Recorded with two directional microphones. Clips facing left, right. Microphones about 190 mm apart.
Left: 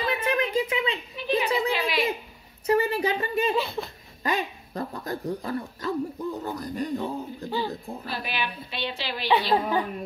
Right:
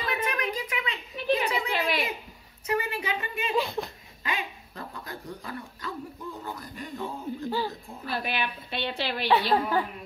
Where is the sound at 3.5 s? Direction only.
15° right (ahead or behind).